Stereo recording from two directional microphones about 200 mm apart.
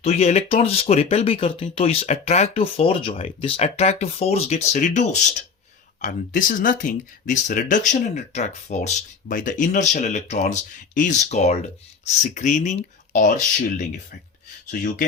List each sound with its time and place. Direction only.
0.0 s speech: 30° left (ahead or behind)